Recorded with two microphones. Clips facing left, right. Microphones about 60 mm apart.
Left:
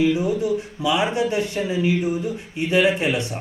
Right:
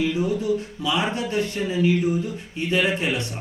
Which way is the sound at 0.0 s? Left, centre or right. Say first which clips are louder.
Left 3 dB; centre.